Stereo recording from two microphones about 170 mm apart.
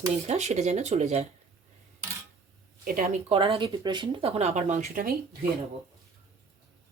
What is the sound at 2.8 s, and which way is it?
Speech, 60° right (ahead or behind).